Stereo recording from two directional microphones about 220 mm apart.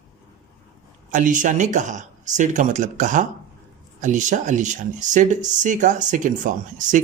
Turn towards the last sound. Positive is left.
turn(degrees=-35)  # may be behind; listen again after turning